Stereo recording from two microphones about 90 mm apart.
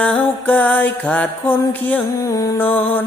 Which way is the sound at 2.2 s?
40° left (ahead or behind).